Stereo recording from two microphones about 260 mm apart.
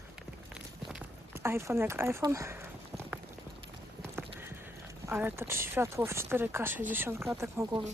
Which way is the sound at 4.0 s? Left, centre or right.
Centre.